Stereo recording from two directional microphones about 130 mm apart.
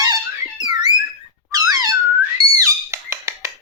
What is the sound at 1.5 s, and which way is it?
Squeak, 25° right (ahead or behind).